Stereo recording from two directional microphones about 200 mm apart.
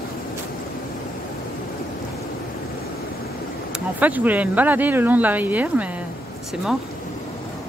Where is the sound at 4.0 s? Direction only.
10° right (ahead or behind).